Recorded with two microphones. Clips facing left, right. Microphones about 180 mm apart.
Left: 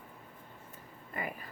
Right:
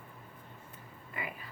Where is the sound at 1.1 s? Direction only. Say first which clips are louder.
Left 3 dB; 45° left (ahead or behind).